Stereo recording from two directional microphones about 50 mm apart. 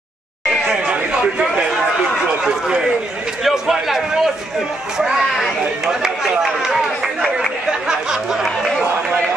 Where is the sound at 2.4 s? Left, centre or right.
Centre.